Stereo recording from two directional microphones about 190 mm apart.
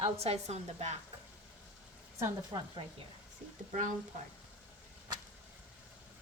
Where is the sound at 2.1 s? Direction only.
15° right (ahead or behind).